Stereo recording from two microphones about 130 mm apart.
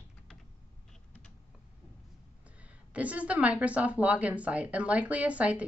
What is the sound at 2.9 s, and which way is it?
Speech, 10° right (ahead or behind).